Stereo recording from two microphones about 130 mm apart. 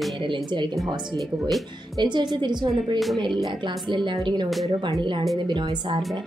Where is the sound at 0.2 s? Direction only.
35° right (ahead or behind).